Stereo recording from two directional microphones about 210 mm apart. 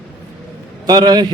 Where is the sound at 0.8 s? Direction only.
20° right (ahead or behind).